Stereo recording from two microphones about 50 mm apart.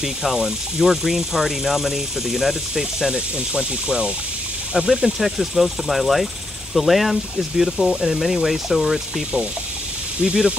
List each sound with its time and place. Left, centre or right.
0.0 s speech: centre
10.2 s speech: centre